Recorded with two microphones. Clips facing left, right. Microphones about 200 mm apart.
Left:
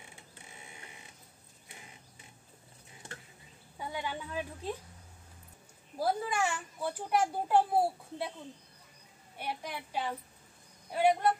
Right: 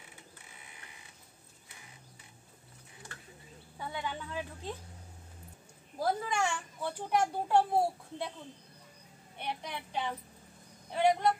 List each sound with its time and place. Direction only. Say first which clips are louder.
0.5 s printer: left 4 dB; 25° left (ahead or behind)
3.7 s a child's voice: left 1 dB; 10° left (ahead or behind)
5.9 s a child's voice: left 1 dB; 5° left (ahead or behind)
9.4 s a child's voice: even; 10° left (ahead or behind)